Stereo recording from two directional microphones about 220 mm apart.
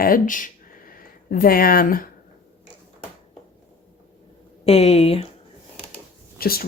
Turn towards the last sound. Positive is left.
turn(degrees=45)  # may be behind; listen again after turning